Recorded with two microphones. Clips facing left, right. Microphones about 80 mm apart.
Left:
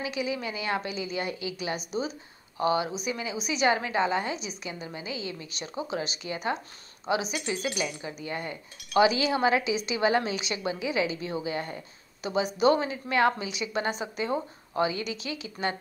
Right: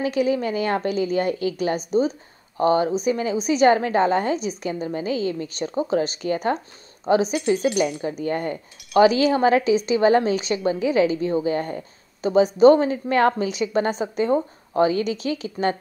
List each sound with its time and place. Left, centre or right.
0.0 s a woman's voice: right